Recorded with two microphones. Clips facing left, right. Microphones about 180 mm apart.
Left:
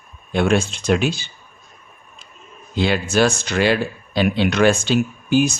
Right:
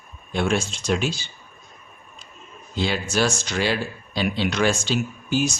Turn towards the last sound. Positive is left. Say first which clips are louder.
# left 6 dB
turn(degrees=55)  # may be behind; listen again after turning